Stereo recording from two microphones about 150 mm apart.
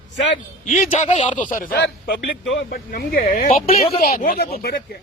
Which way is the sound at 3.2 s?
45° left (ahead or behind).